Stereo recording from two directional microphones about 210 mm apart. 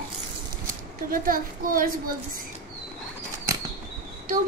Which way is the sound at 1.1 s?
45° right (ahead or behind).